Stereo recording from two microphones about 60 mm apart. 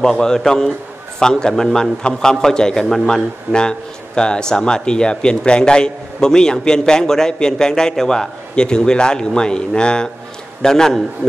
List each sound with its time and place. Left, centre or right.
0.0 s a man's voice: centre